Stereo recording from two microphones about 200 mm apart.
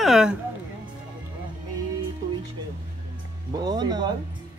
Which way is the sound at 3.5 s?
20° right (ahead or behind).